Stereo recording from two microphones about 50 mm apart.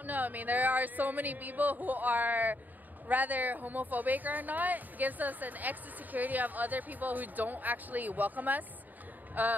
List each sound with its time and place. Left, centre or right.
0.0 s speech: right